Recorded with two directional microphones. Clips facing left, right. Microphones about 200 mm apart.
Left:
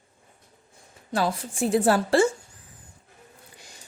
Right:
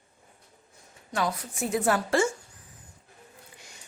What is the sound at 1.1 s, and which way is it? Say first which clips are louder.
Speech: left 3 dB; 30° left (ahead or behind).